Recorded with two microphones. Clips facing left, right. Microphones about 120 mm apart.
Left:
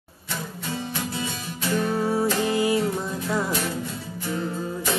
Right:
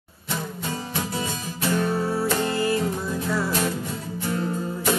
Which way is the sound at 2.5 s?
15° left (ahead or behind).